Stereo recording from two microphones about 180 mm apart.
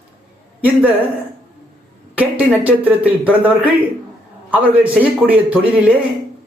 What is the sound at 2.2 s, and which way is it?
Speech, 10° right (ahead or behind).